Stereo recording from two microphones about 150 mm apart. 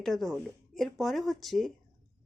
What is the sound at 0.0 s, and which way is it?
Speech, centre (ahead or behind).